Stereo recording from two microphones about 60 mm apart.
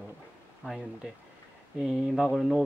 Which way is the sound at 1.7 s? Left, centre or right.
Centre.